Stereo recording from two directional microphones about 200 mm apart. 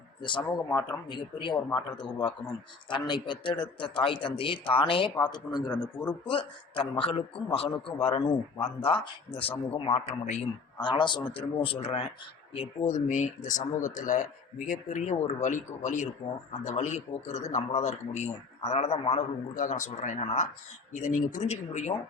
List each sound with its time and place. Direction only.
0.2 s a man's voice: 25° left (ahead or behind)